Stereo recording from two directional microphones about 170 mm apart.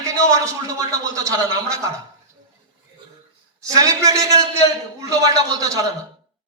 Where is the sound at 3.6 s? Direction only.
20° right (ahead or behind).